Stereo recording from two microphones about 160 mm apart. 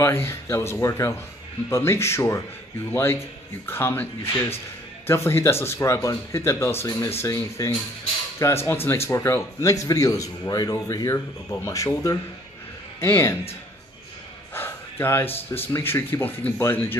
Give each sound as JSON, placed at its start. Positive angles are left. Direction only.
{"t": 0.0, "sound": "a man's voice", "side_deg": 15}
{"t": 14.5, "sound": "gasp", "side_deg": 15}
{"t": 15.5, "sound": "speech", "side_deg": 15}